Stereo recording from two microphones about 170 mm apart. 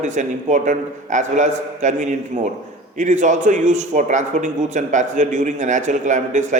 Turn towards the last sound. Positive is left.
turn(degrees=-45)  # may be behind; listen again after turning